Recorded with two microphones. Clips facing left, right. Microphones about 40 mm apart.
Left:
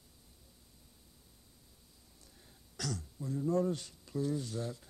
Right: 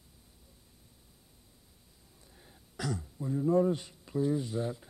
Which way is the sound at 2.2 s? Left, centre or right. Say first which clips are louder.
Right 4 dB; right.